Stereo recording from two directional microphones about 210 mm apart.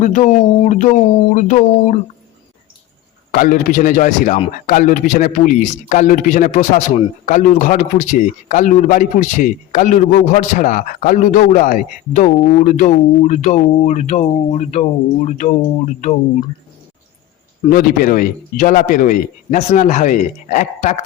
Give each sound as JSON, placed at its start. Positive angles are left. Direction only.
{"t": 0.0, "sound": "speech", "side_deg": 35}
{"t": 1.3, "sound": "speech", "side_deg": 35}
{"t": 3.3, "sound": "speech", "side_deg": 40}
{"t": 17.7, "sound": "speech", "side_deg": 45}